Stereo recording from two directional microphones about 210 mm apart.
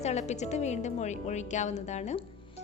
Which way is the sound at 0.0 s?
30° left (ahead or behind).